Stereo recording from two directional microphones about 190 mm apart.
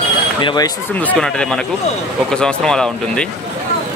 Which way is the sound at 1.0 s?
5° left (ahead or behind).